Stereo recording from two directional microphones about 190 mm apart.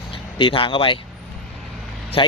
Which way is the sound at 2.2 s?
30° left (ahead or behind).